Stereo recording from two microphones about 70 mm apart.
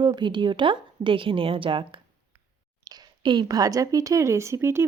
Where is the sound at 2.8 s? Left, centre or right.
Right.